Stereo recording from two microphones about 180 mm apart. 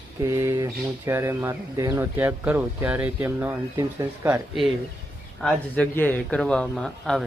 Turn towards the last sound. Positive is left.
turn(degrees=0)  # may be behind; listen again after turning